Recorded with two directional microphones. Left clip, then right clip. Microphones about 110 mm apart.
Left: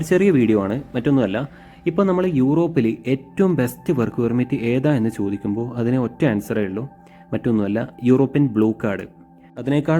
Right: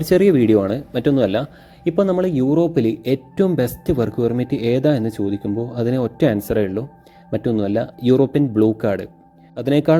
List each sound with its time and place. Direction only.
0.0 s a man's voice: 30° right (ahead or behind)
5.8 s a man's voice: 40° right (ahead or behind)